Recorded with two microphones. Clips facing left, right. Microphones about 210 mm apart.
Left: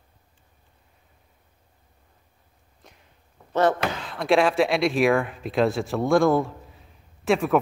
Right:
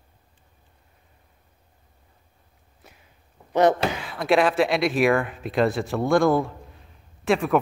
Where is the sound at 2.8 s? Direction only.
5° right (ahead or behind).